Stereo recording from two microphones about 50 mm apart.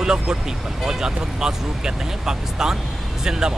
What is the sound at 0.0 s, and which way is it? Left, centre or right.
Speech, centre.